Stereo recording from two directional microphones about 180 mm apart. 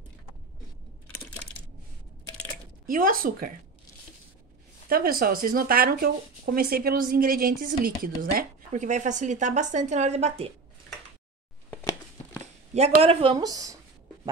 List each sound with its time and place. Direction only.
2.9 s speech: 50° right (ahead or behind)
4.8 s speech: 55° right (ahead or behind); by 10.5 s 35° right (ahead or behind)
12.7 s speech: 35° right (ahead or behind); by 13.7 s 20° right (ahead or behind)